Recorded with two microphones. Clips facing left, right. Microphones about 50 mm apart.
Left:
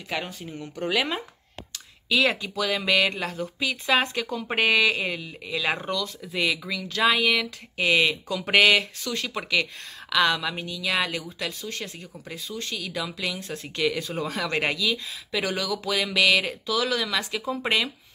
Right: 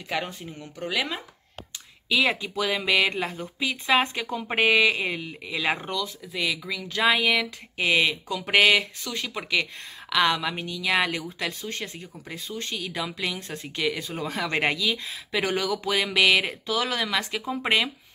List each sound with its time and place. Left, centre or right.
0.7 s speech: centre
2.0 s speech: centre
6.3 s speech: centre
7.0 s speech: centre
10.0 s speech: centre
10.6 s speech: right